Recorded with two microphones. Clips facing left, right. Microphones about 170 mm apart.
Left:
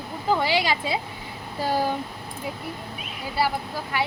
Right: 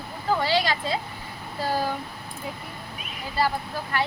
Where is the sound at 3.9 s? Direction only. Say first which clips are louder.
Even; 10° left (ahead or behind).